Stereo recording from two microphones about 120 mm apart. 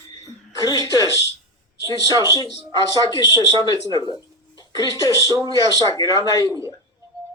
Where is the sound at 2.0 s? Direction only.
30° right (ahead or behind).